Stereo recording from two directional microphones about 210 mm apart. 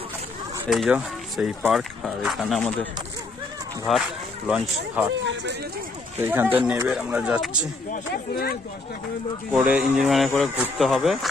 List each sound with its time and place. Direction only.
0.7 s speech: centre (ahead or behind)
6.2 s speech: 10° right (ahead or behind)
7.9 s speech: 45° left (ahead or behind)
9.5 s speech: 5° right (ahead or behind)